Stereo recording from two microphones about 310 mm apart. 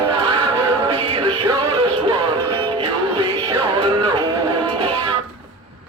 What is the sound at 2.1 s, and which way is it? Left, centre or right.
Music, right.